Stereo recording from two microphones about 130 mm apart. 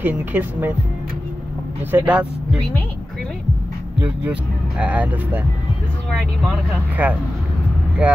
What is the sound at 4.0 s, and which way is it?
Speech, 10° right (ahead or behind).